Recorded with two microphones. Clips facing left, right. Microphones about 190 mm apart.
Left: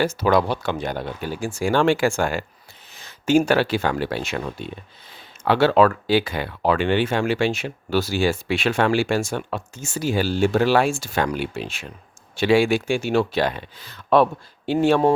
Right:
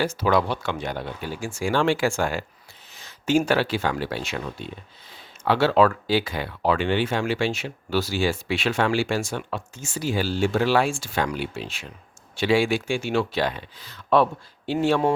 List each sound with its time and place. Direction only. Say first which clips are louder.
0.0 s speech: left 3 dB; 45° left (ahead or behind)
1.7 s speech: left 3 dB; 55° left (ahead or behind)
5.5 s speech: left 3 dB; 55° left (ahead or behind)